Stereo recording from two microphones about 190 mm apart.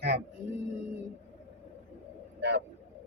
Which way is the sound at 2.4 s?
65° right (ahead or behind).